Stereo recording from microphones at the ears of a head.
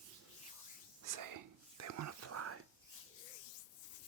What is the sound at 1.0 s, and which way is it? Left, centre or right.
Whispering, right.